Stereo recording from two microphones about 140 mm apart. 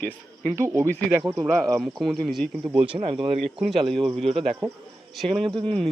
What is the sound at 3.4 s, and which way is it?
Speech, centre (ahead or behind).